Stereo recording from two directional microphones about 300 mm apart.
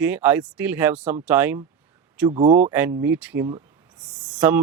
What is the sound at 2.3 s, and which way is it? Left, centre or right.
Speech, centre.